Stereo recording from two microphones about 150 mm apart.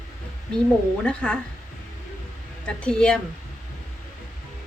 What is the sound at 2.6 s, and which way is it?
Speech, 5° left (ahead or behind).